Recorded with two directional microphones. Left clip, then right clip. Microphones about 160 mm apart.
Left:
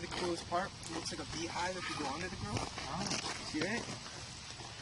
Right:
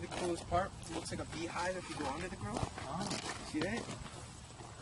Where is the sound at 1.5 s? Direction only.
Centre (ahead or behind).